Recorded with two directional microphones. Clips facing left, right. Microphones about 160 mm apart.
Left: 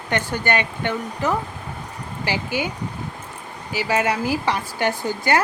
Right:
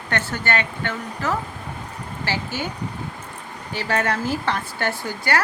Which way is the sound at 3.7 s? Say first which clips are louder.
Left 2 dB; 10° left (ahead or behind).